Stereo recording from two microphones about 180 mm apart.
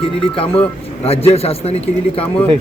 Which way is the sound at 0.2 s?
30° left (ahead or behind).